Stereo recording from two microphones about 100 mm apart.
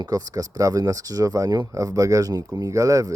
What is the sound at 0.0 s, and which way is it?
Speech, 40° right (ahead or behind).